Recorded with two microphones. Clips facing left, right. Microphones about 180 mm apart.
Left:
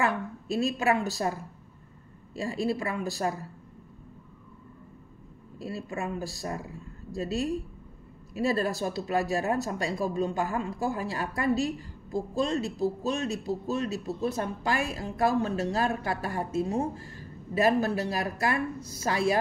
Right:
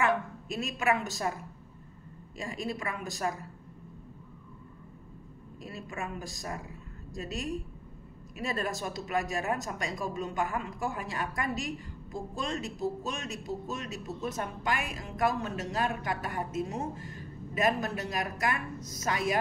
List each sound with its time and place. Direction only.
0.0 s a woman's voice: 35° left (ahead or behind)
5.6 s speech: 30° left (ahead or behind)